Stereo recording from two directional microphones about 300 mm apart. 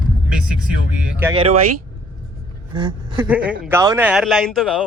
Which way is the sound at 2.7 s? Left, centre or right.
Centre.